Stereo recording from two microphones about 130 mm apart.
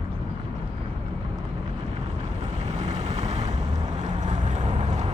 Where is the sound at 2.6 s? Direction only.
60° right (ahead or behind).